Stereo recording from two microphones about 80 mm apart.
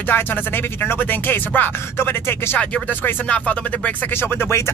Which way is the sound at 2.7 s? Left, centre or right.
Centre.